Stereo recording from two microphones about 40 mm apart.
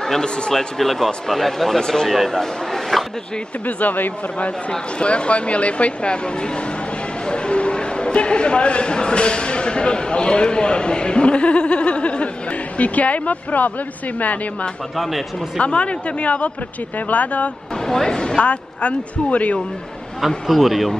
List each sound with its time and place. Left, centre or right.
0.0 s speech: centre
3.6 s speech: left
4.4 s a man's voice: left
15.0 s a man's voice: centre
15.6 s a man's voice: left
17.8 s speech: centre
18.4 s a man's voice: left
20.2 s a man's voice: centre